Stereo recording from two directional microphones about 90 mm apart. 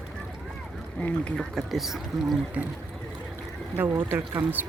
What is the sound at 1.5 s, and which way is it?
Speech, 5° right (ahead or behind).